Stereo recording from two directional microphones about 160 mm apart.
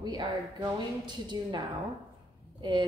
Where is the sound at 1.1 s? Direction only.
30° right (ahead or behind).